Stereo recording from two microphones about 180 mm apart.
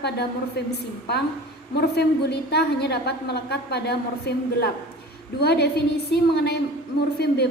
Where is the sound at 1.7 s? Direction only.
65° left (ahead or behind).